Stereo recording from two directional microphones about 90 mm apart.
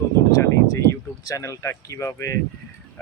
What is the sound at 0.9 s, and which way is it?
Speech, 35° left (ahead or behind).